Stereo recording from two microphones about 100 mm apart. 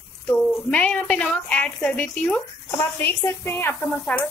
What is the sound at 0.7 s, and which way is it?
A woman's voice, 10° left (ahead or behind).